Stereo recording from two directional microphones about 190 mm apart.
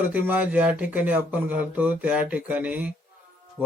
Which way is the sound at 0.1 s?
10° right (ahead or behind).